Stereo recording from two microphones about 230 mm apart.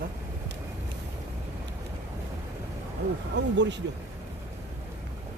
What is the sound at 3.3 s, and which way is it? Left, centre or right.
Speech, right.